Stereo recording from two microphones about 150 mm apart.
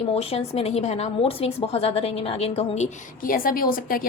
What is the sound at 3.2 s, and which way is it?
Speech, 70° left (ahead or behind).